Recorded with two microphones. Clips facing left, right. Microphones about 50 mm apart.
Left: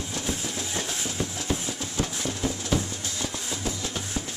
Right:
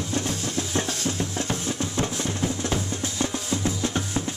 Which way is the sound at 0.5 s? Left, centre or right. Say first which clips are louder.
Right 4 dB; right.